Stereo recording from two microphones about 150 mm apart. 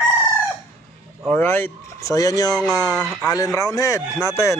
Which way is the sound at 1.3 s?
15° left (ahead or behind).